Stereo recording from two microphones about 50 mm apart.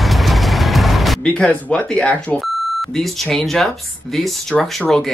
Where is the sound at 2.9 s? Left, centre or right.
Centre.